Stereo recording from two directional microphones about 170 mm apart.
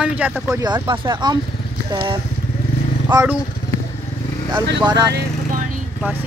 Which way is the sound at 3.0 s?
10° right (ahead or behind).